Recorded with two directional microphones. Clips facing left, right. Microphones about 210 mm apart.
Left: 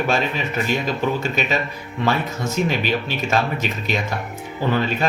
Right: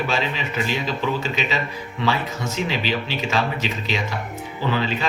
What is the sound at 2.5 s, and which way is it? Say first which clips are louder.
Speech: left 3 dB; 50° left (ahead or behind).